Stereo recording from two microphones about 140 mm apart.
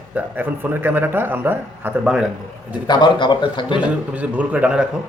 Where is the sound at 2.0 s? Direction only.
5° right (ahead or behind).